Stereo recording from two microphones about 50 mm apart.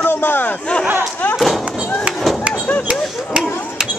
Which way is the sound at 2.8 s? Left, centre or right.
Centre.